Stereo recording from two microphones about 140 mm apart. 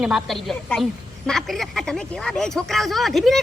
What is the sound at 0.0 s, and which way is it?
Speech, 5° right (ahead or behind).